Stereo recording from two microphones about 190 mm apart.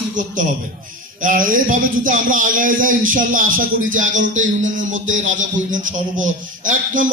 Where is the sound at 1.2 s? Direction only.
45° right (ahead or behind).